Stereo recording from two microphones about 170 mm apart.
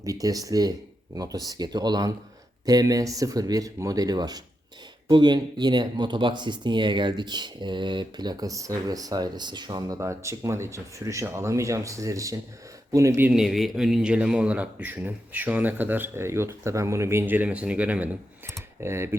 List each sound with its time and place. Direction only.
0.0 s speech: 20° right (ahead or behind)